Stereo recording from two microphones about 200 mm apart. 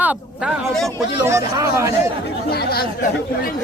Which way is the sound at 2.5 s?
50° left (ahead or behind).